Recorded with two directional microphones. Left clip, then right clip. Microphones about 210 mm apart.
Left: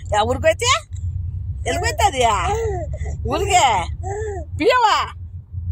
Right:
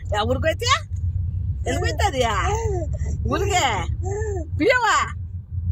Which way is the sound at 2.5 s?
5° left (ahead or behind).